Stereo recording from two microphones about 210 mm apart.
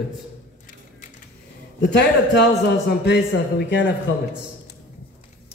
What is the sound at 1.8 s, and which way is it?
A man's voice, 55° left (ahead or behind).